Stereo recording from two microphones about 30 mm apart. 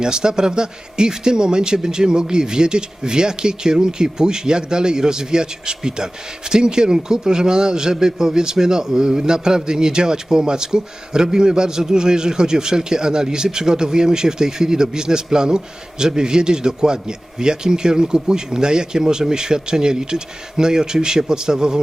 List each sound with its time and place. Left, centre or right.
0.0 s a man's voice: right